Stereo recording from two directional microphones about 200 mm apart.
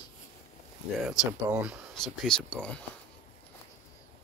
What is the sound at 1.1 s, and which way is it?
Speech, 5° right (ahead or behind).